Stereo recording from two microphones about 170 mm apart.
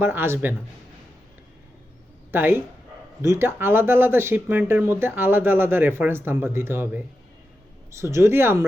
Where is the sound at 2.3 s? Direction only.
10° right (ahead or behind).